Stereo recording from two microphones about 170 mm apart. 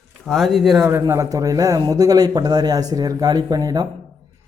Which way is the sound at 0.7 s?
20° right (ahead or behind).